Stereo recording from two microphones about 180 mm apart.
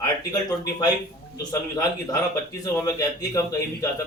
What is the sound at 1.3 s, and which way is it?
A man's voice, 20° left (ahead or behind).